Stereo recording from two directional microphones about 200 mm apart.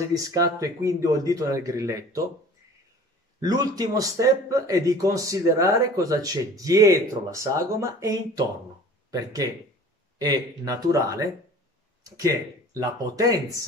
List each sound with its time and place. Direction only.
0.1 s speech: 15° right (ahead or behind)
3.3 s speech: 20° right (ahead or behind)
12.7 s speech: 15° right (ahead or behind)